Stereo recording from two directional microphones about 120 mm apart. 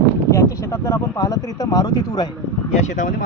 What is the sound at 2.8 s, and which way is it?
Speech, 90° left.